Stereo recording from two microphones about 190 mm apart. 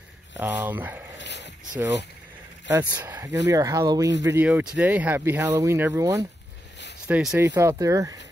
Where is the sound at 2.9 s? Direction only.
10° right (ahead or behind).